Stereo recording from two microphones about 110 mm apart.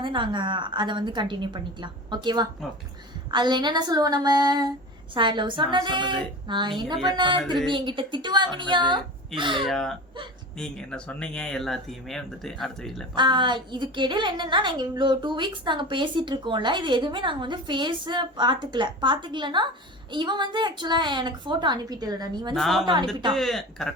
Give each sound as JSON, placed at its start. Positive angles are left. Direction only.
{"t": 0.0, "sound": "a woman's voice", "side_deg": -45}
{"t": 9.6, "sound": "speech", "side_deg": 5}
{"t": 13.1, "sound": "a woman's voice", "side_deg": -45}
{"t": 22.5, "sound": "speech", "side_deg": 0}